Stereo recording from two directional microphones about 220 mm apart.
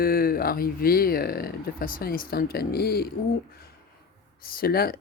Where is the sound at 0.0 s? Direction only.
40° left (ahead or behind).